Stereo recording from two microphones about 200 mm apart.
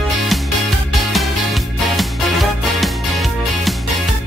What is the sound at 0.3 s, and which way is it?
Music, centre (ahead or behind).